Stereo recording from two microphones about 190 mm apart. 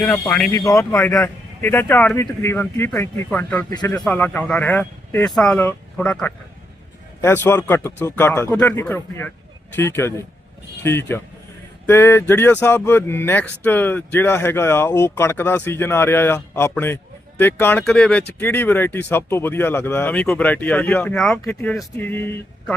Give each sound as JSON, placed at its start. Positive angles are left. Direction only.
{"t": 0.0, "sound": "speech", "side_deg": 5}
{"t": 0.5, "sound": "speech", "side_deg": 15}
{"t": 3.8, "sound": "speech", "side_deg": 20}
{"t": 4.0, "sound": "speech", "side_deg": 5}